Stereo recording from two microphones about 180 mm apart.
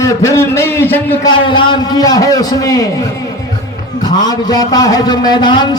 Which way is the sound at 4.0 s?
20° left (ahead or behind).